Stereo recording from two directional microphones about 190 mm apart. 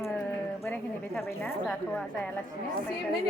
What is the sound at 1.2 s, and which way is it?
Speech, 10° left (ahead or behind).